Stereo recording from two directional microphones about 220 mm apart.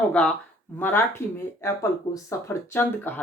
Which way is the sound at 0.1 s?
5° left (ahead or behind).